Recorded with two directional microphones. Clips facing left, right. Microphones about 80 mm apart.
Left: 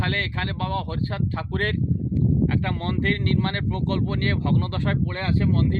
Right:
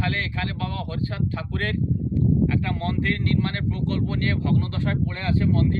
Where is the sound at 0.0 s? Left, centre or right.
Left.